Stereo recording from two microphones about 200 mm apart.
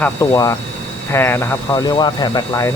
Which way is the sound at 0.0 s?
15° left (ahead or behind).